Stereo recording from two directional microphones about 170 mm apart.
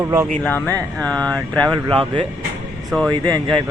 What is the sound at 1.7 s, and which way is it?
Speech, 30° right (ahead or behind).